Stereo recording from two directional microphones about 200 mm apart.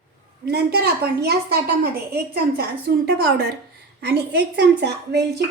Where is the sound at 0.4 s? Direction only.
55° right (ahead or behind).